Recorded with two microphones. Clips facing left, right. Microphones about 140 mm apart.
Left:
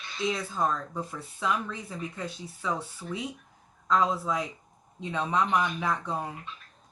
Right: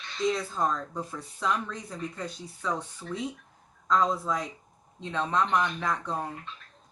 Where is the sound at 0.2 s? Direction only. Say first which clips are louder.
Right 1 dB; centre (ahead or behind).